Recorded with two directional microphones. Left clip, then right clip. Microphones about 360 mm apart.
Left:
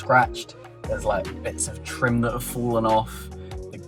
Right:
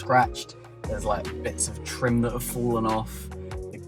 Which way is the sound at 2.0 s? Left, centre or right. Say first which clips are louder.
Left 2 dB; centre.